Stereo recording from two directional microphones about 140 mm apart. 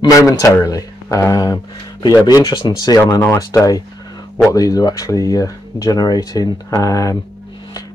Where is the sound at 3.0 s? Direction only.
15° left (ahead or behind).